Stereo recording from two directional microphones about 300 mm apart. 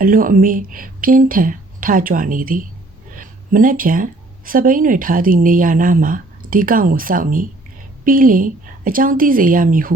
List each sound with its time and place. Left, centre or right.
0.0 s speech: right